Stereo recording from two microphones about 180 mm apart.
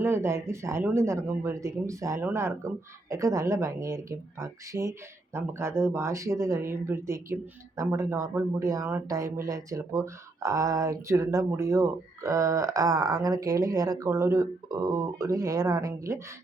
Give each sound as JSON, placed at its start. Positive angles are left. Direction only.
{"t": 0.0, "sound": "speech", "side_deg": -15}